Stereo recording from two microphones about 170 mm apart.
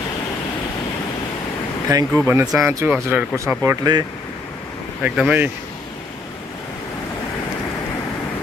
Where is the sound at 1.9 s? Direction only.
15° right (ahead or behind).